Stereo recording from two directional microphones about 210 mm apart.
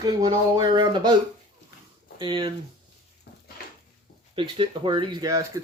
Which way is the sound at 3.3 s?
50° left (ahead or behind).